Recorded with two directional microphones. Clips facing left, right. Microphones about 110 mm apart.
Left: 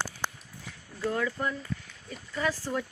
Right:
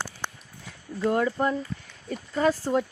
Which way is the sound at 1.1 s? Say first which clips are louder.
Right 6 dB; 40° right (ahead or behind).